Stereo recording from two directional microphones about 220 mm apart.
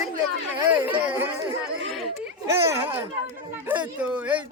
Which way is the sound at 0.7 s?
10° right (ahead or behind).